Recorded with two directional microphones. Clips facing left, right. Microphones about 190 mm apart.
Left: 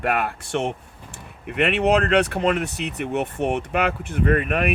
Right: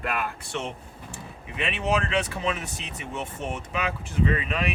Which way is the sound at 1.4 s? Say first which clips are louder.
Left 9 dB; 65° left (ahead or behind).